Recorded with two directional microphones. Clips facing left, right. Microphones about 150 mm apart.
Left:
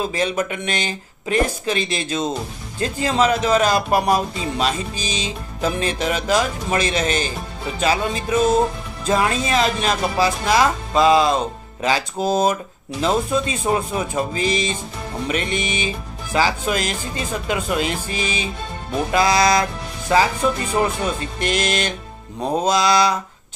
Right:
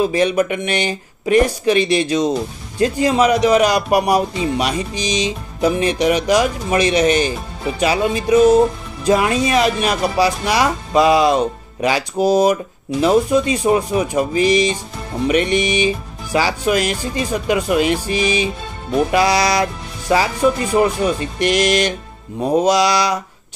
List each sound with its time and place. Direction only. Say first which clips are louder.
0.1 s speech: right 6 dB; 15° right (ahead or behind)